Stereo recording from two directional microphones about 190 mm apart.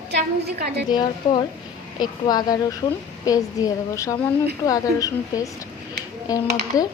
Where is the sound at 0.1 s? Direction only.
60° right (ahead or behind).